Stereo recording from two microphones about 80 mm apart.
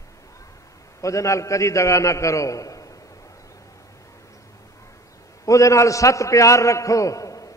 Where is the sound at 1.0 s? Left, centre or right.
Left.